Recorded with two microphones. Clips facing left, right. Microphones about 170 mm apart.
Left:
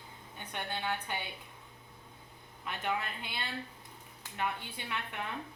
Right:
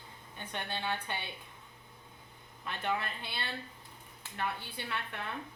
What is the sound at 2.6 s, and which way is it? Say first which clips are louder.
A woman's voice: even; 10° left (ahead or behind).